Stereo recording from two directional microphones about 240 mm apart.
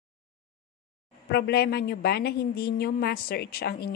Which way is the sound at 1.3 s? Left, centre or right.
Left.